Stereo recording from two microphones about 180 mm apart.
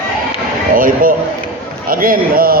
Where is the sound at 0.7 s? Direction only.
50° right (ahead or behind).